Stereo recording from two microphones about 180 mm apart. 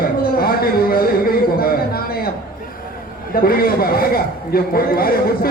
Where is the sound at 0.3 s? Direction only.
55° left (ahead or behind).